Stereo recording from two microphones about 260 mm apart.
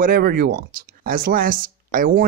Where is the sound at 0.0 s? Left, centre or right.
Right.